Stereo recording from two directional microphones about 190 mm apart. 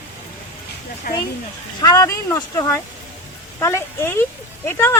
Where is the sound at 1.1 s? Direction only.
50° left (ahead or behind).